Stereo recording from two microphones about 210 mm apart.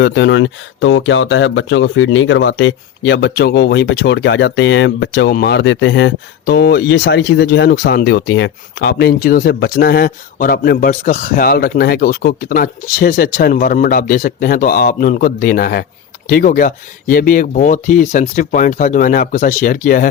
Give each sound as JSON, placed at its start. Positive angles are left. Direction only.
{"t": 0.0, "sound": "speech", "side_deg": 60}